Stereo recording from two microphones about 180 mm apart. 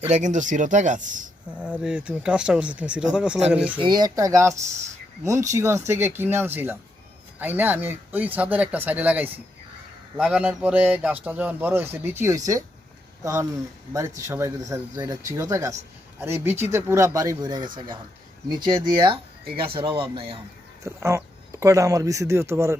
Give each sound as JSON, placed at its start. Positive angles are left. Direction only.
{"t": 0.0, "sound": "speech", "side_deg": -40}
{"t": 1.5, "sound": "speech", "side_deg": -5}
{"t": 3.8, "sound": "speech", "side_deg": -25}
{"t": 20.8, "sound": "speech", "side_deg": -15}